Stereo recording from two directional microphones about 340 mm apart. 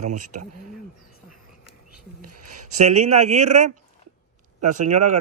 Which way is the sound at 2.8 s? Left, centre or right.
Centre.